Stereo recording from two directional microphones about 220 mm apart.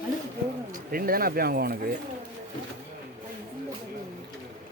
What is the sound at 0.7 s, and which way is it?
Speech, 40° right (ahead or behind).